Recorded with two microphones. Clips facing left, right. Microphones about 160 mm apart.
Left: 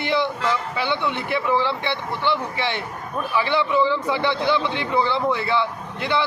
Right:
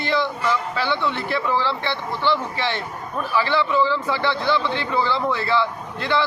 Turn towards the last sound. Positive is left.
turn(degrees=20)  # may be behind; listen again after turning